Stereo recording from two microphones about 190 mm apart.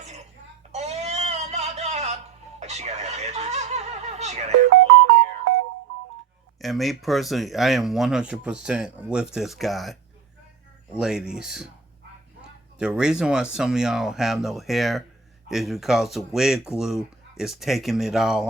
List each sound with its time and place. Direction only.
0.7 s a sound: 35° right (ahead or behind)
6.6 s speech: centre (ahead or behind)
12.8 s speech: 5° right (ahead or behind)